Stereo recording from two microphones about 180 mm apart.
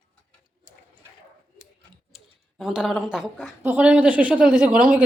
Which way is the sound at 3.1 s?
5° right (ahead or behind).